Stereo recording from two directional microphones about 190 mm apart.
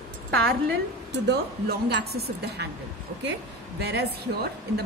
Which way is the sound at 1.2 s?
60° right (ahead or behind).